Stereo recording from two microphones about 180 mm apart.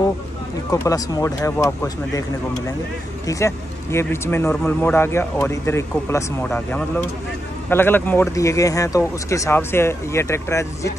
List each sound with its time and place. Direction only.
0.7 s speech: 20° left (ahead or behind)